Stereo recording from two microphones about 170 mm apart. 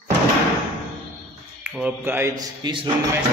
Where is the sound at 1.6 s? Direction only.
5° right (ahead or behind).